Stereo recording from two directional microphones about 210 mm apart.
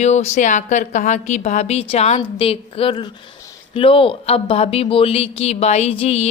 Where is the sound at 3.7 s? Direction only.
25° left (ahead or behind).